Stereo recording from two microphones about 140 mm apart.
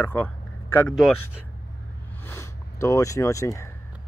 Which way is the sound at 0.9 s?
Centre (ahead or behind).